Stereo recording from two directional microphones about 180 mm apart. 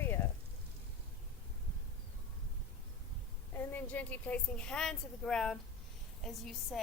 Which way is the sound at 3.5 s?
10° left (ahead or behind).